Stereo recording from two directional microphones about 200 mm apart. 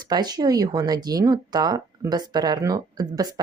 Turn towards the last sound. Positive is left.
turn(degrees=-20)  # may be behind; listen again after turning